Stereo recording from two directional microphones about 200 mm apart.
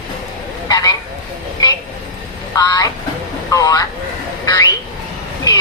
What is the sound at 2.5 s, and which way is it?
Speech, 20° left (ahead or behind).